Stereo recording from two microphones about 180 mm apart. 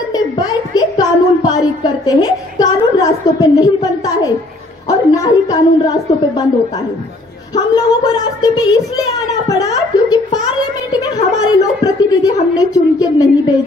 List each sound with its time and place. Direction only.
0.1 s a sound: 20° left (ahead or behind)
4.8 s a woman's voice: 20° left (ahead or behind)
7.5 s a woman's voice: 20° left (ahead or behind)